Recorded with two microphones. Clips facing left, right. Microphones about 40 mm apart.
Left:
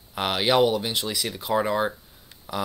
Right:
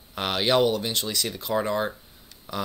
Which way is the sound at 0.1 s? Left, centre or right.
Centre.